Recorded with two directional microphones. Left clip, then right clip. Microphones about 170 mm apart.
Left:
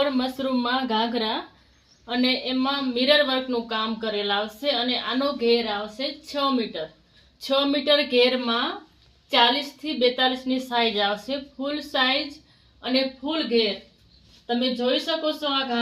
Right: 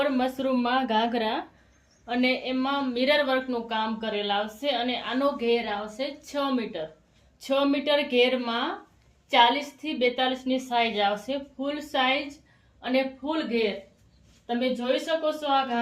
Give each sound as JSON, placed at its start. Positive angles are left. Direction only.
{"t": 0.0, "sound": "a woman's voice", "side_deg": -20}
{"t": 7.4, "sound": "a woman's voice", "side_deg": -20}